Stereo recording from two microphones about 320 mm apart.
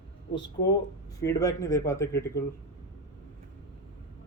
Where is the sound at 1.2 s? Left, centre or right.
Centre.